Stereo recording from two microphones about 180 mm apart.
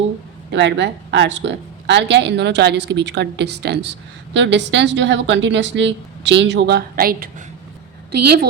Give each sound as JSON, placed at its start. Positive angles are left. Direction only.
{"t": 0.5, "sound": "a woman's voice", "side_deg": -85}
{"t": 4.4, "sound": "a woman's voice", "side_deg": -80}